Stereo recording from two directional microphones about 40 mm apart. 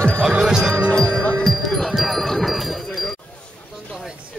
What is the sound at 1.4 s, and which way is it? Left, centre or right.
Wind chime, centre.